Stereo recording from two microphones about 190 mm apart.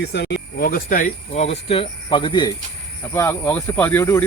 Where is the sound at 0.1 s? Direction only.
60° left (ahead or behind).